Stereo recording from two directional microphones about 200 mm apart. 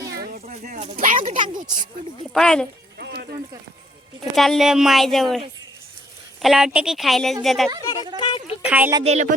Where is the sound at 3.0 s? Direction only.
55° right (ahead or behind).